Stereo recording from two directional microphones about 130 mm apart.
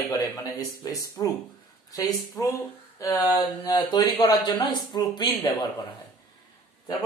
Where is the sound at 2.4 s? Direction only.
20° left (ahead or behind); by 5.7 s 35° left (ahead or behind).